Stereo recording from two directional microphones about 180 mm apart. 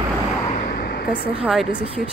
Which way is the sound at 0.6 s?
60° left (ahead or behind).